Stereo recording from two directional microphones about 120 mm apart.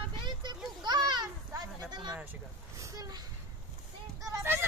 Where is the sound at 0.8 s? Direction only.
35° right (ahead or behind).